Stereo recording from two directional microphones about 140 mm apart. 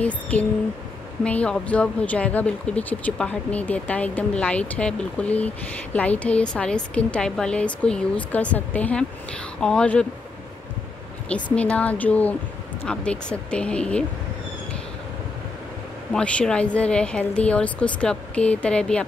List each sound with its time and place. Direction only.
0.0 s speech: 10° left (ahead or behind)
11.5 s speech: 10° left (ahead or behind)
16.1 s speech: 10° left (ahead or behind)